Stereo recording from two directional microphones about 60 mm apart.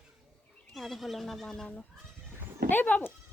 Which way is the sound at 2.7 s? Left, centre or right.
Left.